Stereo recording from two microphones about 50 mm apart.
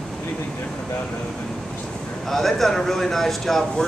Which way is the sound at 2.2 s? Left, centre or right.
Centre.